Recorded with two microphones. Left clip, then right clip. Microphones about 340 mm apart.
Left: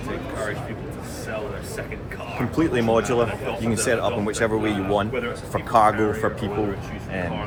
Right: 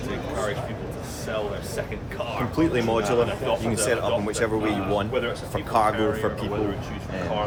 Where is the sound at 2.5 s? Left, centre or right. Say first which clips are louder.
Left 3 dB; centre.